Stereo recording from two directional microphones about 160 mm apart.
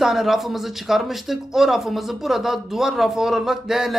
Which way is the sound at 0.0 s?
Centre (ahead or behind).